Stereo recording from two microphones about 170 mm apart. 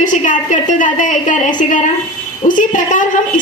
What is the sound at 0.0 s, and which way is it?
A woman's voice, 50° left (ahead or behind).